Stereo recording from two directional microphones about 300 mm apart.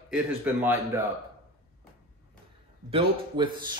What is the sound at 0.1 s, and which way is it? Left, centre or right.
Speech, centre.